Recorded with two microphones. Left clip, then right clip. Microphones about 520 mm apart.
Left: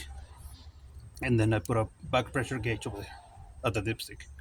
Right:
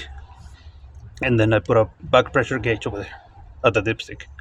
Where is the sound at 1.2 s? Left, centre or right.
Left.